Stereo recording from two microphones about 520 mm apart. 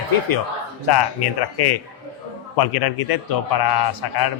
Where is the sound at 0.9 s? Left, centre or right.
Left.